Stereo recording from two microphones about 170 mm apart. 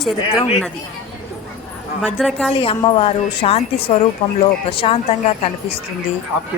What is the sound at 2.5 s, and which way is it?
A woman's voice, 30° left (ahead or behind).